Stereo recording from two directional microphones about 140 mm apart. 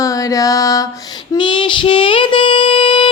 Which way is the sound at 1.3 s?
35° left (ahead or behind).